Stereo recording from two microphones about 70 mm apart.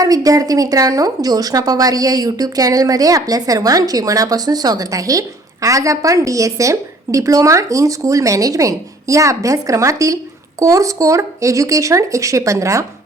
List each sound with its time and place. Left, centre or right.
0.0 s a woman's voice: right